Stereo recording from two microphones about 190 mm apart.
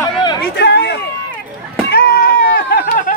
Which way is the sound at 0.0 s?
25° left (ahead or behind).